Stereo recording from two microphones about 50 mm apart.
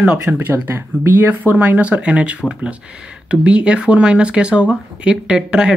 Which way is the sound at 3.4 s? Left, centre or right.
Right.